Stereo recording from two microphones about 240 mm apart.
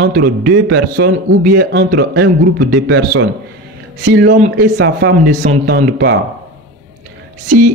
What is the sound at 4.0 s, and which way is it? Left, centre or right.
Speech, right.